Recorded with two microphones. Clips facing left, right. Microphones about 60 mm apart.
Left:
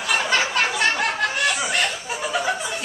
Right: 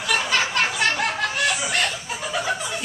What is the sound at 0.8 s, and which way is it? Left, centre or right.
Snicker, centre.